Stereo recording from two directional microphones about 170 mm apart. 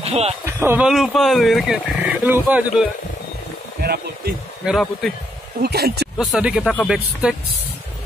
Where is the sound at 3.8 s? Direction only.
65° right (ahead or behind).